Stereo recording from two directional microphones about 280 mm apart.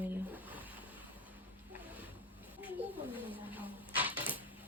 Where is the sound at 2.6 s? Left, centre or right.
Centre.